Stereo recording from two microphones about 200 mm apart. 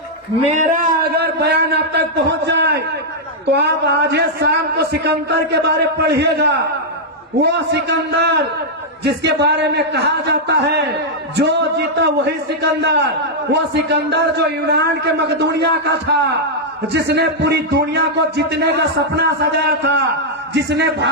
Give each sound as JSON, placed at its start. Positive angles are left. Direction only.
{"t": 0.4, "sound": "a man's voice", "side_deg": -35}
{"t": 1.0, "sound": "a sound", "side_deg": -55}
{"t": 3.5, "sound": "a man's voice", "side_deg": -55}